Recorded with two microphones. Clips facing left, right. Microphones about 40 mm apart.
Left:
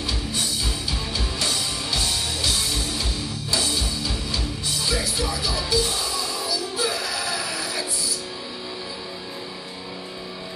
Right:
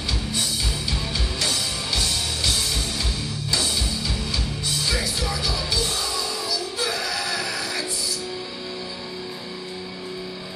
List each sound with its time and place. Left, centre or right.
1.1 s music: centre
3.5 s music: centre